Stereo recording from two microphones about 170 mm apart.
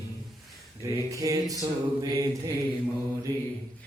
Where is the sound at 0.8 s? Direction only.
20° right (ahead or behind).